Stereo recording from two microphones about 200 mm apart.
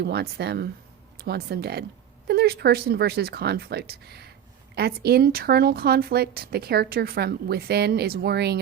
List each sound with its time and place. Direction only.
0.0 s speech: 55° right (ahead or behind)